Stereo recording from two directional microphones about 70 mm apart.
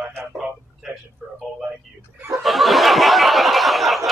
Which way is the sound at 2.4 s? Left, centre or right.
Centre.